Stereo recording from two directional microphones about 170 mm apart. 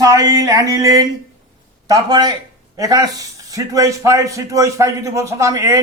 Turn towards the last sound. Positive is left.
turn(degrees=-20)  # may be behind; listen again after turning